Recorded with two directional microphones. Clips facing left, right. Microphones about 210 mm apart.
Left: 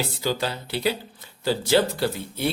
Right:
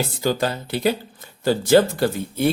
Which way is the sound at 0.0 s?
50° right (ahead or behind).